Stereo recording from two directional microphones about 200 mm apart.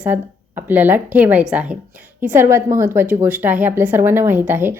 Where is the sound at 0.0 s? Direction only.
10° right (ahead or behind).